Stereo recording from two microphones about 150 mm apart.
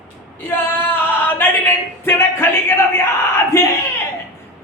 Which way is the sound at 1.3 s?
15° left (ahead or behind).